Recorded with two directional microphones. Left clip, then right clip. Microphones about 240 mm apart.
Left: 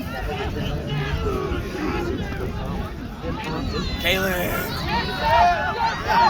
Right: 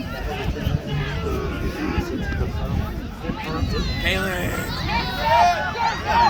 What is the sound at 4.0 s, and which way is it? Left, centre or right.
Speech, left.